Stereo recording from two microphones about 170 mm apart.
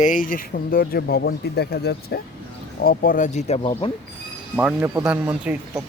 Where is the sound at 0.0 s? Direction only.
50° left (ahead or behind); by 3.9 s 30° left (ahead or behind).